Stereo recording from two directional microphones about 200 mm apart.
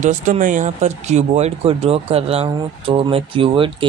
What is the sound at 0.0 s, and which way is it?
Speech, 40° right (ahead or behind).